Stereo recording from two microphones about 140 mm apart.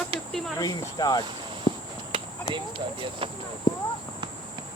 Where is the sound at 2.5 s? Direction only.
35° right (ahead or behind).